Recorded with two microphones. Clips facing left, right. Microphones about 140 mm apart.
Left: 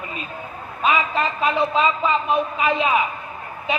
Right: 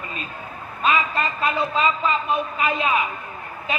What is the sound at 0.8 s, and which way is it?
A man's voice, 20° left (ahead or behind).